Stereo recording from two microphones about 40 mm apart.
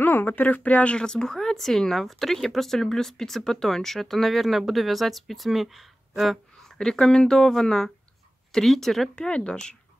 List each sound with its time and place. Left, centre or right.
0.0 s speech: left
0.9 s speech: centre
6.8 s speech: centre
9.2 s speech: left